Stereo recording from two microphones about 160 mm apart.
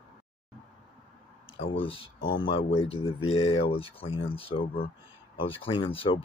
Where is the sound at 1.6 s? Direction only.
35° left (ahead or behind).